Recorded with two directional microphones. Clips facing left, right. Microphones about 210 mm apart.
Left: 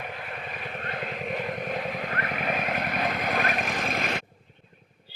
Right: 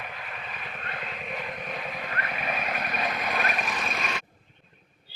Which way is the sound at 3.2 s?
50° left (ahead or behind).